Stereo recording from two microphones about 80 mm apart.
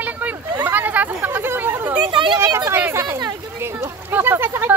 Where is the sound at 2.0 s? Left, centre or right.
Right.